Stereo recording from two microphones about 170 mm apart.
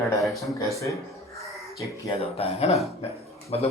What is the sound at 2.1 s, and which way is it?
Speech, 35° left (ahead or behind).